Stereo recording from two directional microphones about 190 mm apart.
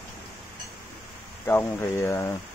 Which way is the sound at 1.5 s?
15° left (ahead or behind).